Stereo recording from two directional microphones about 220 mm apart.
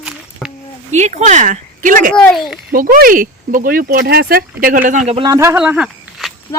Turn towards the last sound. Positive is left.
turn(degrees=0)  # may be behind; listen again after turning